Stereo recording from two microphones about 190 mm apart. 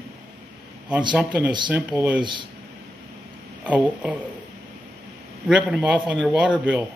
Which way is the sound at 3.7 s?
5° right (ahead or behind).